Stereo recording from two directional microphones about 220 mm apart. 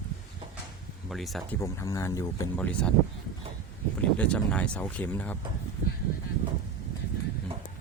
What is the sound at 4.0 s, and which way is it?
Speech, 5° left (ahead or behind).